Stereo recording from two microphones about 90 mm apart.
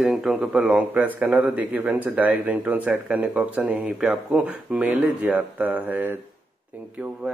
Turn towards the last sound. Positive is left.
turn(degrees=-20)  # may be behind; listen again after turning